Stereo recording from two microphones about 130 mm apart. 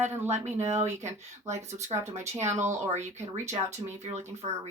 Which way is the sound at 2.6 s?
60° right (ahead or behind).